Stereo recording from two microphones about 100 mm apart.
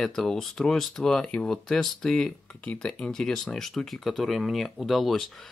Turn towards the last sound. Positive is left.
turn(degrees=0)  # may be behind; listen again after turning